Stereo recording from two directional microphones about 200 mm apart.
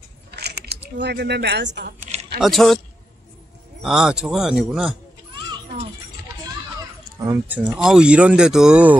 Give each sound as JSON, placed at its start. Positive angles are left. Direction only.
{"t": 0.4, "sound": "a sound", "side_deg": -55}
{"t": 0.9, "sound": "speech", "side_deg": -55}
{"t": 2.0, "sound": "a sound", "side_deg": -35}
{"t": 2.4, "sound": "speech", "side_deg": 0}
{"t": 3.8, "sound": "speech", "side_deg": -5}
{"t": 7.2, "sound": "speech", "side_deg": -10}